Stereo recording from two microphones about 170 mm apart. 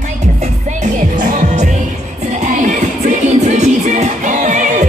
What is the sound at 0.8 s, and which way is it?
Music, 50° right (ahead or behind).